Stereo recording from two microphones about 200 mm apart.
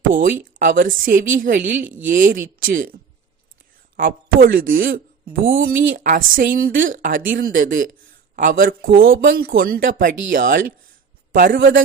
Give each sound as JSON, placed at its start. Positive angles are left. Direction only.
{"t": 0.1, "sound": "speech", "side_deg": -45}
{"t": 3.9, "sound": "a man's voice", "side_deg": -45}
{"t": 11.5, "sound": "a man's voice", "side_deg": -70}